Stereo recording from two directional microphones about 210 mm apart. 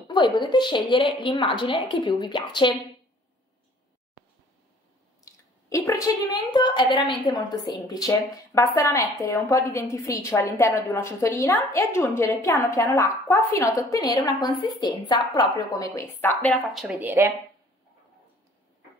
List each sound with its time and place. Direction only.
0.1 s a woman's voice: 20° left (ahead or behind)
5.2 s a sound: 15° left (ahead or behind)
6.5 s a woman's voice: 20° left (ahead or behind); by 17.3 s 10° right (ahead or behind)